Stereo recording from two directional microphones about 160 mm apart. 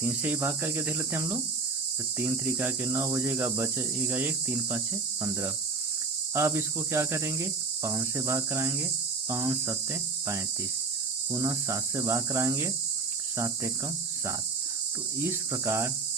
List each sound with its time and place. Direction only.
0.0 s speech: 10° right (ahead or behind)
6.3 s speech: 15° right (ahead or behind)
11.3 s speech: 20° right (ahead or behind)
15.2 s speech: 15° right (ahead or behind)